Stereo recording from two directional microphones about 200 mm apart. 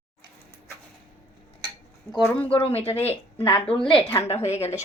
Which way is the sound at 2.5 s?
30° left (ahead or behind).